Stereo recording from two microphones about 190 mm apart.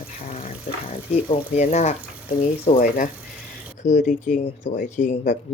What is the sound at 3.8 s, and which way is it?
Speech, 40° left (ahead or behind).